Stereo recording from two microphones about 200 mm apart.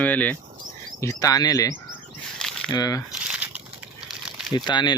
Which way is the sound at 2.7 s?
20° left (ahead or behind).